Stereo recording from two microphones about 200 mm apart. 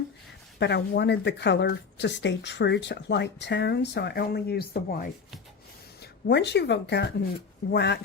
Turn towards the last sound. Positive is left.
turn(degrees=55)  # may be behind; listen again after turning